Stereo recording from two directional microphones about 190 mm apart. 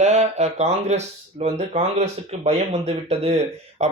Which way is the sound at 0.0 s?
35° right (ahead or behind).